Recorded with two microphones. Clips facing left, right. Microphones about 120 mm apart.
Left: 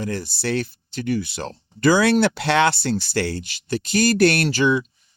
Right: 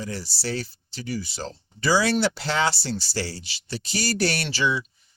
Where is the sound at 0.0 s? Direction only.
55° left (ahead or behind).